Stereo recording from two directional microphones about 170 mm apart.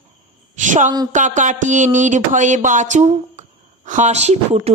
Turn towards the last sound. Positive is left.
turn(degrees=-40)  # may be behind; listen again after turning